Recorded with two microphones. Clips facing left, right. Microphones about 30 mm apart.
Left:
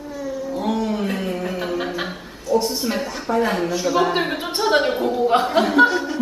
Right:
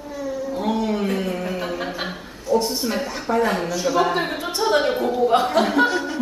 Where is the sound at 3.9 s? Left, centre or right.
Centre.